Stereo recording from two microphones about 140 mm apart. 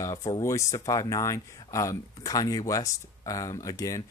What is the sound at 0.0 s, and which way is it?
Speech, 25° left (ahead or behind).